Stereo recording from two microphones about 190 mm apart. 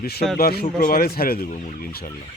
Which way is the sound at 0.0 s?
55° left (ahead or behind).